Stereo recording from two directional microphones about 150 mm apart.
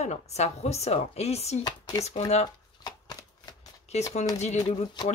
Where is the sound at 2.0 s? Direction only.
45° left (ahead or behind).